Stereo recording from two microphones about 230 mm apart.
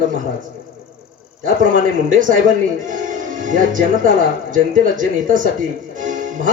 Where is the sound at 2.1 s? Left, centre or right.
Right.